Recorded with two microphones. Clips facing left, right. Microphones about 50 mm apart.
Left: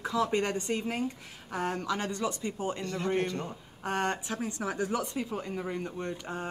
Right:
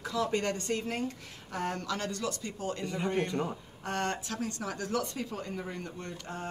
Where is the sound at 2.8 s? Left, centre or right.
Centre.